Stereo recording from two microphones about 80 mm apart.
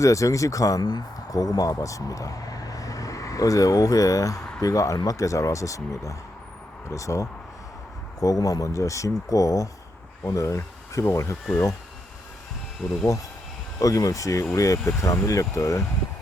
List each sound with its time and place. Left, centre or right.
0.0 s speech: left
13.7 s speech: left